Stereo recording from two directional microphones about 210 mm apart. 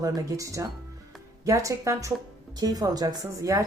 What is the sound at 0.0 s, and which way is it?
Speech, 15° right (ahead or behind).